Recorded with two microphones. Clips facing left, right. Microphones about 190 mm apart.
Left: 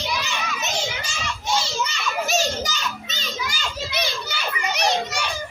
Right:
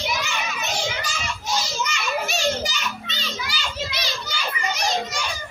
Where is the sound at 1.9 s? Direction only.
40° left (ahead or behind).